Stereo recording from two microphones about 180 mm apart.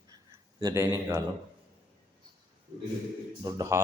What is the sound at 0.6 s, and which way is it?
Speech, 20° right (ahead or behind).